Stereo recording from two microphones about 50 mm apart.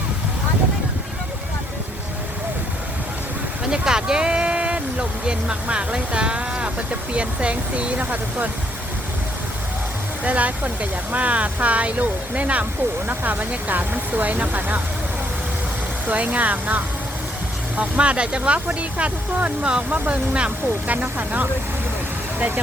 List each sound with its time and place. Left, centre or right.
3.7 s speech: centre; by 8.4 s right
10.2 s speech: right
16.0 s speech: right